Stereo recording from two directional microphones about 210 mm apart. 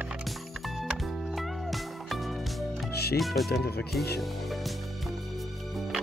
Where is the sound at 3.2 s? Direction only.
Centre (ahead or behind).